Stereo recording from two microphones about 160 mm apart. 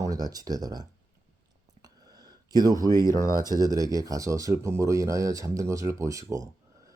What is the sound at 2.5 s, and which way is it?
Speech, 20° right (ahead or behind).